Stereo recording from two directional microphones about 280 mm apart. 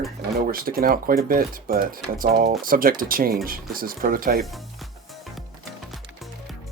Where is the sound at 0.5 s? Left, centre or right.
Right.